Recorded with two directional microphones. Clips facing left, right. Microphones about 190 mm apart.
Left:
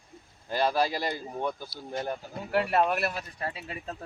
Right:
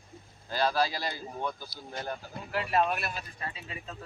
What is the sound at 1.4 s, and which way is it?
Speech, 20° left (ahead or behind).